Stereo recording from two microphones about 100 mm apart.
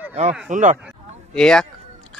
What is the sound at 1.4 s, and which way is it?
Speech, 5° left (ahead or behind).